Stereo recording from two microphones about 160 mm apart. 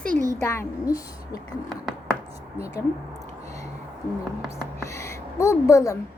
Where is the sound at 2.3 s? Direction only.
40° right (ahead or behind).